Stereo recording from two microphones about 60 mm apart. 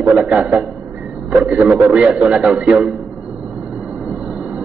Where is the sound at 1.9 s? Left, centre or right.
Centre.